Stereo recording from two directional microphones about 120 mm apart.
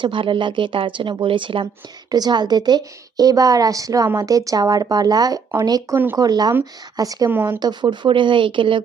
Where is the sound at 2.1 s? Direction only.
35° right (ahead or behind).